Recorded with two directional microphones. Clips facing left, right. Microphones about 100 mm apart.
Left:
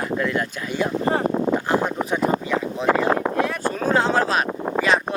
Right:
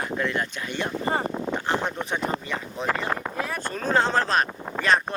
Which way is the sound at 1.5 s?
5° left (ahead or behind).